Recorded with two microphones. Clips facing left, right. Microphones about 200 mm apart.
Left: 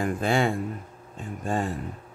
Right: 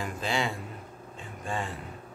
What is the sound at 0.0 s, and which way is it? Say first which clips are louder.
Speech: left 7 dB; 55° left (ahead or behind).